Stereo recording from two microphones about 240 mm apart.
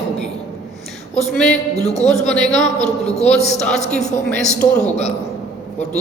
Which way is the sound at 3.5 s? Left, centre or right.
Centre.